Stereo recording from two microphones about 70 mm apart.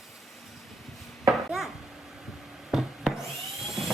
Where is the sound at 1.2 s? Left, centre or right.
Centre.